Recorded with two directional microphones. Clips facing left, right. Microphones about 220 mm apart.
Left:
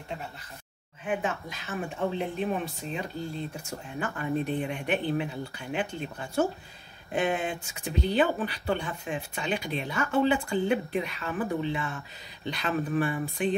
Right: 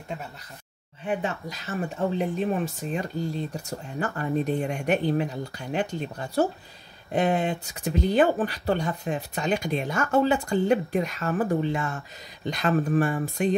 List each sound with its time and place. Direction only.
1.0 s speech: 40° right (ahead or behind)